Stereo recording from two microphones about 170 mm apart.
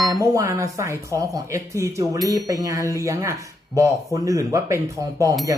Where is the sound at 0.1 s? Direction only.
20° right (ahead or behind).